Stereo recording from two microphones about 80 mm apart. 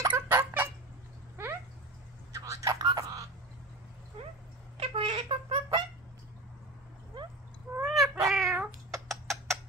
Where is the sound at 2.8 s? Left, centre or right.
Right.